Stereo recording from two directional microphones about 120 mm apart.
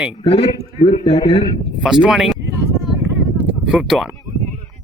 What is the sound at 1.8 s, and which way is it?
Speech, 5° right (ahead or behind).